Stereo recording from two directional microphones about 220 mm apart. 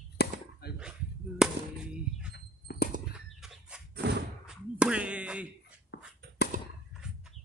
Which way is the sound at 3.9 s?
50° right (ahead or behind).